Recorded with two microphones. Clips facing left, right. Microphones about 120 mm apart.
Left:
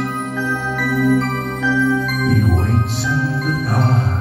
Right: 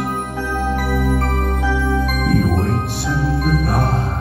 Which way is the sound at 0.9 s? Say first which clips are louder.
Left 4 dB; 55° right (ahead or behind).